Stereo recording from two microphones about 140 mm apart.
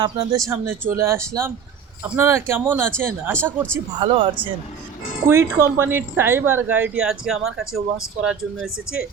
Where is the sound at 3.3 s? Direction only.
10° left (ahead or behind).